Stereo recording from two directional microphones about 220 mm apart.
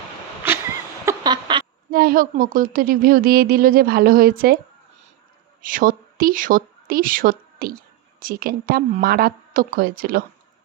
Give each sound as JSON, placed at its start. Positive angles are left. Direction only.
{"t": 0.4, "sound": "a sound", "side_deg": -10}
{"t": 1.9, "sound": "speech", "side_deg": -45}
{"t": 5.6, "sound": "speech", "side_deg": -40}